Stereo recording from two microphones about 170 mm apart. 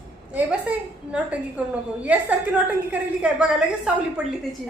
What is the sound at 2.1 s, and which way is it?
A woman's voice, 10° right (ahead or behind).